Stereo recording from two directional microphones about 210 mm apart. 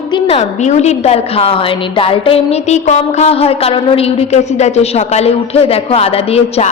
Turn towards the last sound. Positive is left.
turn(degrees=30)  # may be behind; listen again after turning